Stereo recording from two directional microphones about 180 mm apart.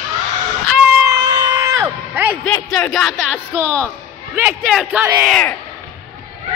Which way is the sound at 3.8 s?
10° right (ahead or behind).